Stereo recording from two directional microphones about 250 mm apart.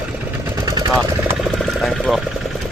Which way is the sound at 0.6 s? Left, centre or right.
Centre.